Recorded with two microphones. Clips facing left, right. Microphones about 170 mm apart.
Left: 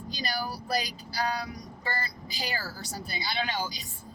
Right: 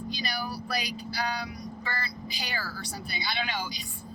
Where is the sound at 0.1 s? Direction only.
35° left (ahead or behind).